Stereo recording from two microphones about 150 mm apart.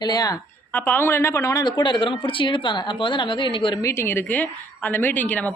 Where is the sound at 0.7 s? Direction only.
15° left (ahead or behind); by 3.7 s 35° left (ahead or behind).